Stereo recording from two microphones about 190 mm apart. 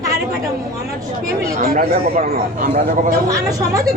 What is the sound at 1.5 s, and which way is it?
Speech, 45° right (ahead or behind).